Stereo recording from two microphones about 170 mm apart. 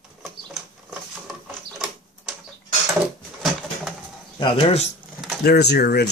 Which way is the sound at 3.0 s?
Centre (ahead or behind).